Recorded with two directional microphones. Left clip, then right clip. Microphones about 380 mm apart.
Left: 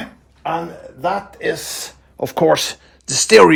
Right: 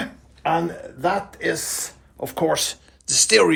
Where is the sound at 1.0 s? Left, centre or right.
Centre.